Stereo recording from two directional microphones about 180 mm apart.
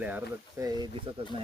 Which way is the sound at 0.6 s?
20° right (ahead or behind).